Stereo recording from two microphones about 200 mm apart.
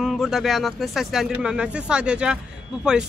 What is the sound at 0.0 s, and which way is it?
Speech, centre (ahead or behind).